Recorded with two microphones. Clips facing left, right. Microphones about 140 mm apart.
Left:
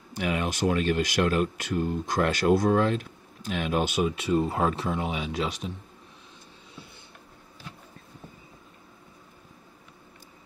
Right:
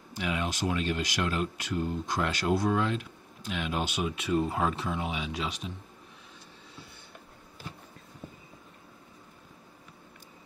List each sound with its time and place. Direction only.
0.2 s speech: 50° left (ahead or behind)